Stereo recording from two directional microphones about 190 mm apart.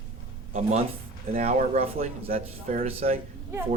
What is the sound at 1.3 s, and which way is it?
Speech, 40° right (ahead or behind).